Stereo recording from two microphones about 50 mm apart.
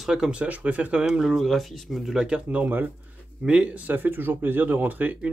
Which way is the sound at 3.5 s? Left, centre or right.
Centre.